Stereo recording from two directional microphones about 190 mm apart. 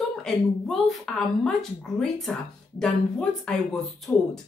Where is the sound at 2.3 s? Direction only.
5° left (ahead or behind).